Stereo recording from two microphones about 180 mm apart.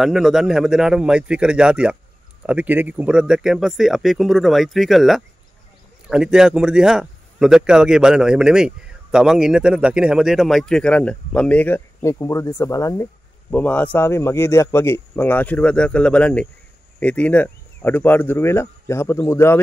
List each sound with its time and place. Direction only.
0.0 s speech: centre (ahead or behind); by 19.6 s 15° left (ahead or behind)